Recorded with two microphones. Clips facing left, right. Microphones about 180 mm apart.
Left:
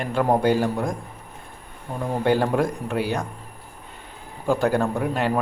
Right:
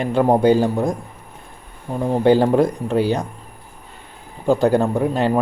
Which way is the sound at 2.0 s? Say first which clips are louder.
Right 6 dB; 30° right (ahead or behind).